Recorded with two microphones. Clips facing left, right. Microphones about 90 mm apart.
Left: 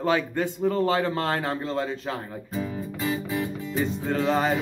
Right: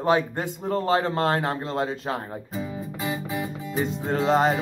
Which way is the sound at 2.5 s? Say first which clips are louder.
Left 4 dB; 15° right (ahead or behind).